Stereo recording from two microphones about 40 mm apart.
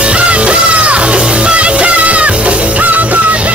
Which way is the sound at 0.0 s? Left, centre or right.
Right.